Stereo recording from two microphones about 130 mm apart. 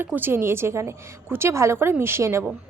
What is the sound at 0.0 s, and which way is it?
A woman's voice, 15° right (ahead or behind).